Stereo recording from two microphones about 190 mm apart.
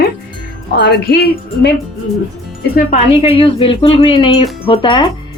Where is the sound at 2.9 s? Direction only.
30° left (ahead or behind).